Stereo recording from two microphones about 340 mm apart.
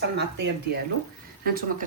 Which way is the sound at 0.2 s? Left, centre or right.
Right.